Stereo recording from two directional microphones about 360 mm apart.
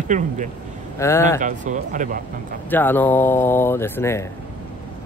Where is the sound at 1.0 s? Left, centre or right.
Centre.